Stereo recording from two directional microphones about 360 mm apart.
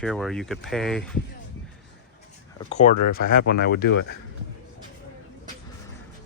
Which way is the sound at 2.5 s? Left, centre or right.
Centre.